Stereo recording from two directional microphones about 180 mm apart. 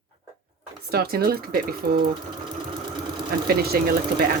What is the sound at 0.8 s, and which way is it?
Speech, 60° right (ahead or behind).